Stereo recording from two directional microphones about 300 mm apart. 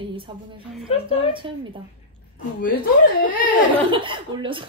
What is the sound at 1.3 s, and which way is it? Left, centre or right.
Speech, centre.